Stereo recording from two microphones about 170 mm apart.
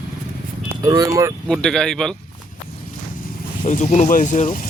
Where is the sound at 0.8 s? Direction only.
25° right (ahead or behind).